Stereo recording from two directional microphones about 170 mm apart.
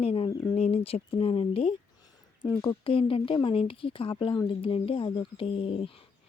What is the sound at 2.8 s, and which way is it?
Speech, 35° left (ahead or behind).